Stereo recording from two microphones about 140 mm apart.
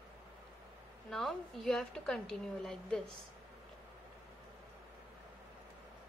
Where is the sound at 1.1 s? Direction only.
Centre (ahead or behind).